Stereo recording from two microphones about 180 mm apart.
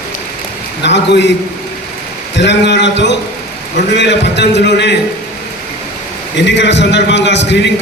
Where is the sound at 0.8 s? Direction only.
75° left (ahead or behind).